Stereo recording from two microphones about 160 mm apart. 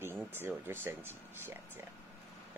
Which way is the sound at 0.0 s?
15° right (ahead or behind).